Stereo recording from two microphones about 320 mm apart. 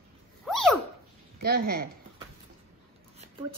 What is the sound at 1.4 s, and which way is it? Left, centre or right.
Speech, right.